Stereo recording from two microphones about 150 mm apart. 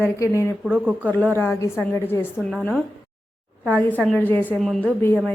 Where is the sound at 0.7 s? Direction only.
10° right (ahead or behind).